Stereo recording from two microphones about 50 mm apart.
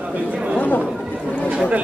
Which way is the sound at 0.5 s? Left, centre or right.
Left.